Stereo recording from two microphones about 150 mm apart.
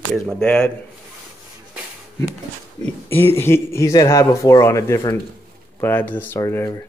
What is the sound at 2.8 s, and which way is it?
Speech, 15° left (ahead or behind).